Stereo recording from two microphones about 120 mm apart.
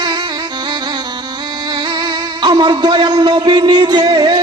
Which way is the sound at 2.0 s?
40° right (ahead or behind).